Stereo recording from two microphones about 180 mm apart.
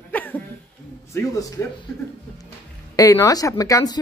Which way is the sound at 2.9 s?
20° left (ahead or behind).